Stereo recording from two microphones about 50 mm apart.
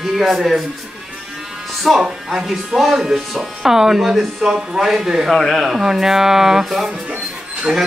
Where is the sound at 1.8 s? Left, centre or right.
Centre.